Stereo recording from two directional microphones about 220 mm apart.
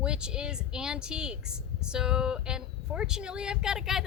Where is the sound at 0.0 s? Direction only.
5° right (ahead or behind).